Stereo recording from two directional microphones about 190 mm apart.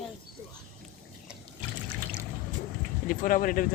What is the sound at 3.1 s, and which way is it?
Speech, 45° left (ahead or behind).